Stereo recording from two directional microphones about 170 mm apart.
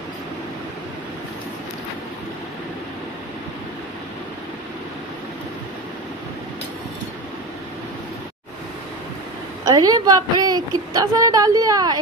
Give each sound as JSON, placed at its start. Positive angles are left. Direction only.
{"t": 9.7, "sound": "a woman's voice", "side_deg": -25}